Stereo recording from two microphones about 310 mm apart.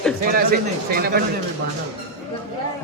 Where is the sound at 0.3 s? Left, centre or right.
Right.